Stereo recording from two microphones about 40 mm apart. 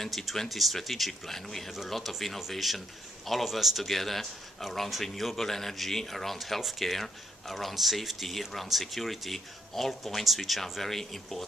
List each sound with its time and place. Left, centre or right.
0.0 s a man's voice: centre